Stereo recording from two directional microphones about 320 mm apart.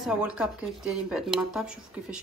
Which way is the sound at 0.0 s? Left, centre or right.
Centre.